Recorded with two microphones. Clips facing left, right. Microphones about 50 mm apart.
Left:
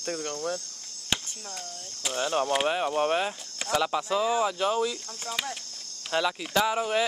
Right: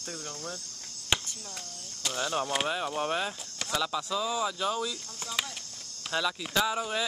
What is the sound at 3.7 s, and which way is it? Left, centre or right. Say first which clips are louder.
Speech: left 5 dB; left.